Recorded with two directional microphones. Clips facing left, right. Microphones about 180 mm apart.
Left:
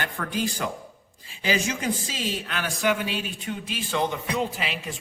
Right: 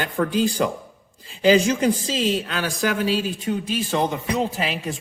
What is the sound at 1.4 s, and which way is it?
A man's voice, 35° right (ahead or behind).